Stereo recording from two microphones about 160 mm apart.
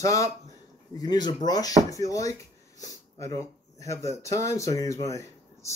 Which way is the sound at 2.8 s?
20° left (ahead or behind).